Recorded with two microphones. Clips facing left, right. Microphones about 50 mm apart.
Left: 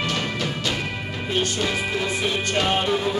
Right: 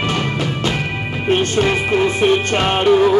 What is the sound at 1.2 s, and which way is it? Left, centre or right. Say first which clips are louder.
Music: right 9 dB; right.